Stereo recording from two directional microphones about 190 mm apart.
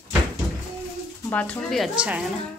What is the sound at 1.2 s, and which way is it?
Speech, 5° left (ahead or behind).